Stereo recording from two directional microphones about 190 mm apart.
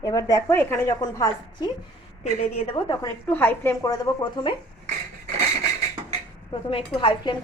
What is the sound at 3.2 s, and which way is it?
A woman's voice, 10° left (ahead or behind).